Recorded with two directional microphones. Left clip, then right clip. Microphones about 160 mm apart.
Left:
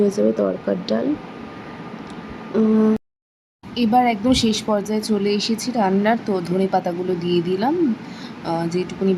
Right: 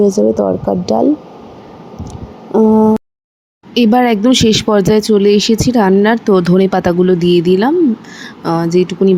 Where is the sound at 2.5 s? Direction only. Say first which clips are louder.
Right 9 dB; 5° right (ahead or behind).